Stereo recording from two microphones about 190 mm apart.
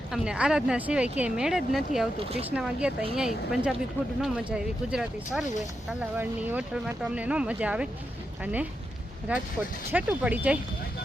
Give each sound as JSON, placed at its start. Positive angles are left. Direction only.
{"t": 0.1, "sound": "speech", "side_deg": -5}
{"t": 2.1, "sound": "speech", "side_deg": -30}
{"t": 2.5, "sound": "speech", "side_deg": -5}
{"t": 9.3, "sound": "speech", "side_deg": -5}